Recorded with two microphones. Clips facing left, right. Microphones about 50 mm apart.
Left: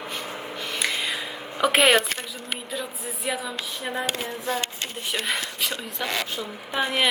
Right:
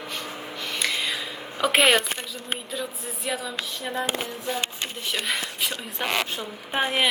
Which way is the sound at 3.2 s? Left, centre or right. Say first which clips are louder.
Even; centre.